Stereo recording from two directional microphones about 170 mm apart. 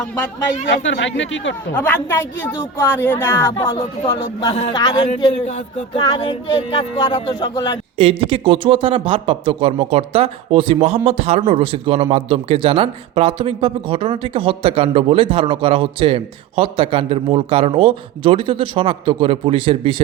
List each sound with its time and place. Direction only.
0.7 s speech: 90° left
1.7 s a woman's voice: 10° left (ahead or behind)
3.5 s speech: 30° left (ahead or behind)
6.2 s music: 30° left (ahead or behind)
7.9 s speech: 30° right (ahead or behind)